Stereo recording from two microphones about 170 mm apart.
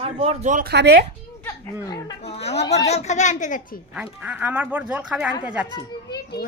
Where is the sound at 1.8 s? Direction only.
20° left (ahead or behind).